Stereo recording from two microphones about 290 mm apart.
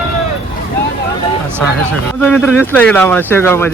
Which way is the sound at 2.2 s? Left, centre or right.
Centre.